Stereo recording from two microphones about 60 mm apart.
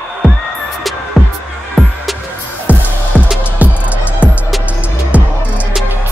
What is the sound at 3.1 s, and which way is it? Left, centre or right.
Music, left.